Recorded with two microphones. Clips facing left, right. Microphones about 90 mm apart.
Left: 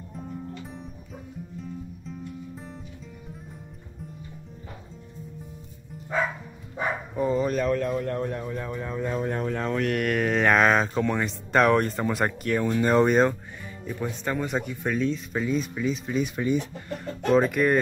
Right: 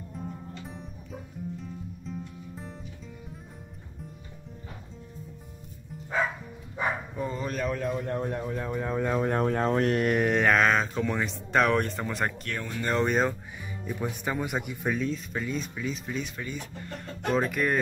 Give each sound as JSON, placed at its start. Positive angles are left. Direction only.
{"t": 0.1, "sound": "music", "side_deg": 0}
{"t": 7.2, "sound": "speech", "side_deg": 0}
{"t": 8.2, "sound": "speech", "side_deg": -20}
{"t": 8.9, "sound": "speech", "side_deg": -50}
{"t": 9.6, "sound": "speech", "side_deg": -35}
{"t": 10.2, "sound": "speech", "side_deg": 0}
{"t": 16.3, "sound": "speech", "side_deg": 20}
{"t": 17.0, "sound": "speech", "side_deg": 0}